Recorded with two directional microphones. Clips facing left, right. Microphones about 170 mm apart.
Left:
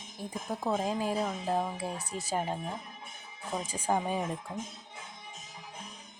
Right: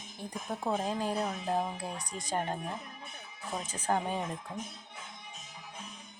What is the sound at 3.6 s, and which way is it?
Speech, 10° left (ahead or behind).